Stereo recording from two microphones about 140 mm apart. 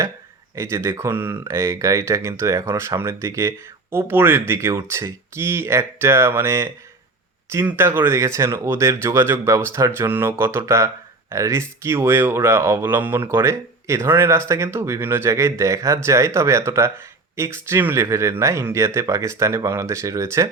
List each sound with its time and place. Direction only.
0.5 s speech: 20° right (ahead or behind)